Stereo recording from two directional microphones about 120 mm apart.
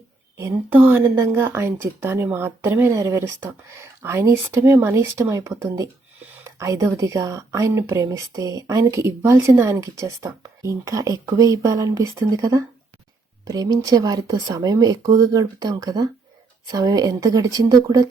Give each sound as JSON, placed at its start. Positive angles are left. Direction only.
{"t": 0.3, "sound": "a woman's voice", "side_deg": -20}